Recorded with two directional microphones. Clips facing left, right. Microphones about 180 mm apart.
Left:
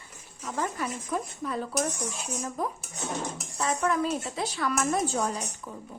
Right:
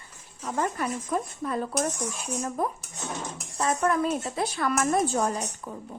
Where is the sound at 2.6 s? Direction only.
55° right (ahead or behind).